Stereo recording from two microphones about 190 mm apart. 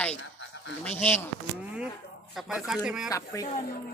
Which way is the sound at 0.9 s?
10° left (ahead or behind).